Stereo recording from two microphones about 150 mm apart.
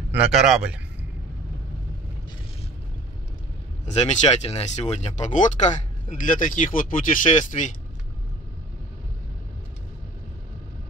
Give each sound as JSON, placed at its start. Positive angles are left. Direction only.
{"t": 0.1, "sound": "a man's voice", "side_deg": -5}
{"t": 3.8, "sound": "speech", "side_deg": 50}